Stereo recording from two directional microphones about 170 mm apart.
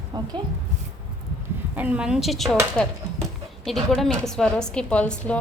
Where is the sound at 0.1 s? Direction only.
25° right (ahead or behind).